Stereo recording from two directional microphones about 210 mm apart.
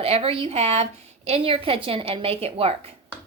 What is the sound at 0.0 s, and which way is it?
A woman's voice, 30° right (ahead or behind).